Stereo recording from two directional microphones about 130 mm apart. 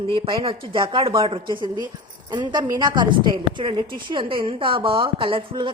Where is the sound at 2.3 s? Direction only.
35° right (ahead or behind).